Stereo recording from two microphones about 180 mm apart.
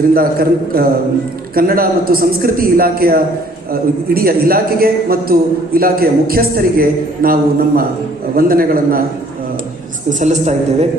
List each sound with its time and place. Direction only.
0.1 s a man's voice: 55° right (ahead or behind)
8.4 s a man's voice: 55° right (ahead or behind)
10.1 s a woman's voice: 40° right (ahead or behind)